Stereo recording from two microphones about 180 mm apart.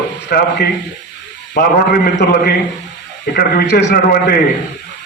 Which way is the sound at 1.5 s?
65° left (ahead or behind).